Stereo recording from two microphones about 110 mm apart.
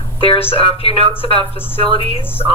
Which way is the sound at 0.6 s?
60° left (ahead or behind).